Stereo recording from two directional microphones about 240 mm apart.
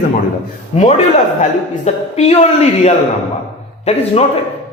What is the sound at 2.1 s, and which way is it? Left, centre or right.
Speech, left.